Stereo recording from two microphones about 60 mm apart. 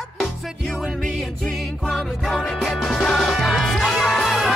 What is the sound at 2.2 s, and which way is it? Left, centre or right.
Music, centre.